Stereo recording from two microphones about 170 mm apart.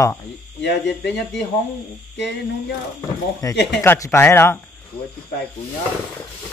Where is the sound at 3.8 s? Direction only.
15° left (ahead or behind).